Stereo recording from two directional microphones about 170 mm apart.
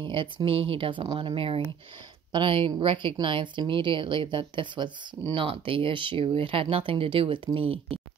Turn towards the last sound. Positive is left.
turn(degrees=-35)  # may be behind; listen again after turning